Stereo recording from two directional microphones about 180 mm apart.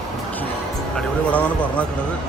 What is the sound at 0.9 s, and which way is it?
Speech, 5° left (ahead or behind).